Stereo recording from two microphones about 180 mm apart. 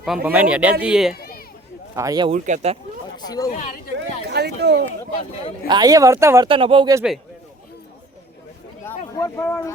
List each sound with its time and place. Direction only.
0.0 s speech: 5° right (ahead or behind)
1.1 s a sound: 55° left (ahead or behind)
2.0 s speech: 20° right (ahead or behind)
2.3 s speech: 40° right (ahead or behind)
3.2 s speech: 20° left (ahead or behind)
4.3 s speech: 65° right (ahead or behind)
5.6 s speech: 20° right (ahead or behind)
6.5 s speech: 30° right (ahead or behind)
8.8 s a sound: 15° left (ahead or behind)